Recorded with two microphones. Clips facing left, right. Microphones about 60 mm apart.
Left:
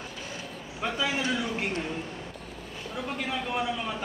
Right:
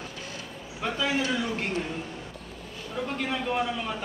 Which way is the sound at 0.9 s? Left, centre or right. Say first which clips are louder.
Right 2 dB; centre.